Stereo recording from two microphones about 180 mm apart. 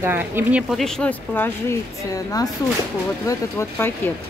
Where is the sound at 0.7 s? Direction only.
Centre (ahead or behind).